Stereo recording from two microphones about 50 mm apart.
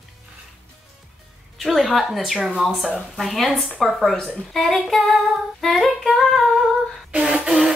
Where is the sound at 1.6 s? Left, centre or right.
Centre.